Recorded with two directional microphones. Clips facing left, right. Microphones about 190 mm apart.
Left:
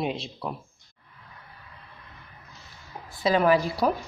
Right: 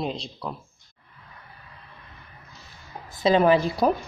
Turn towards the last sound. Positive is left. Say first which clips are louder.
# right 2 dB
turn(degrees=-25)  # may be behind; listen again after turning